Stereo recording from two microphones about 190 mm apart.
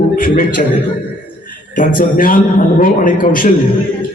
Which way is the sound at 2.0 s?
45° left (ahead or behind).